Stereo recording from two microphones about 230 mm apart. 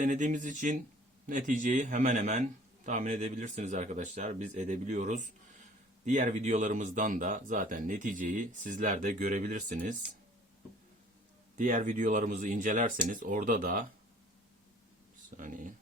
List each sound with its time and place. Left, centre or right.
0.0 s a man's voice: right
11.5 s a man's voice: right
15.4 s a man's voice: right